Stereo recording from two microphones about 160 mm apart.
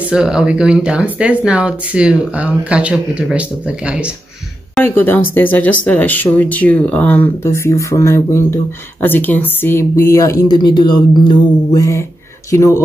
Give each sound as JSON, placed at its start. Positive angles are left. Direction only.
{"t": 0.1, "sound": "speech", "side_deg": -5}
{"t": 4.8, "sound": "speech", "side_deg": 15}